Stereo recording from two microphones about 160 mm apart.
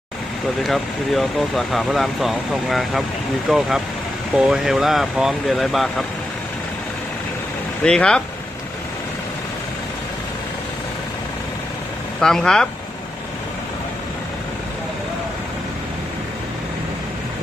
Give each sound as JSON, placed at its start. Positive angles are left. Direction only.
{"t": 0.7, "sound": "speech", "side_deg": 0}
{"t": 7.8, "sound": "speech", "side_deg": 5}
{"t": 12.2, "sound": "speech", "side_deg": 5}